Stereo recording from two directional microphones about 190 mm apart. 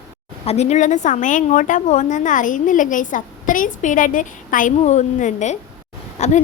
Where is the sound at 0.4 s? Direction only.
35° left (ahead or behind).